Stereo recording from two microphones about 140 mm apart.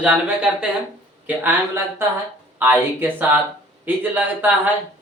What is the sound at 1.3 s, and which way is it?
Speech, 15° right (ahead or behind).